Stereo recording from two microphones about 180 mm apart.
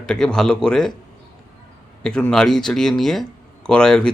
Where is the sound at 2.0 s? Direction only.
5° left (ahead or behind).